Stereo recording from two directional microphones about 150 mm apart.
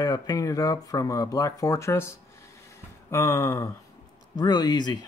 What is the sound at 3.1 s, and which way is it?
Speech, 20° left (ahead or behind).